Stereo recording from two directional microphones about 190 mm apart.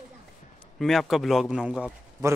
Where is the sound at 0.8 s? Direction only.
Centre (ahead or behind).